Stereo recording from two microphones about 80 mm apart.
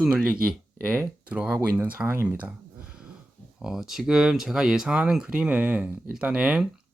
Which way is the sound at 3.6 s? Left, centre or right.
Centre.